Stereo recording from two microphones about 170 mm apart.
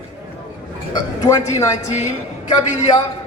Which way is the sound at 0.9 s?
20° left (ahead or behind).